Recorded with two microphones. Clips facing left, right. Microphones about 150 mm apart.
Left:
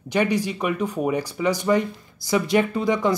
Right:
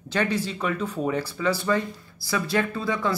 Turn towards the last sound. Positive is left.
turn(degrees=20)  # may be behind; listen again after turning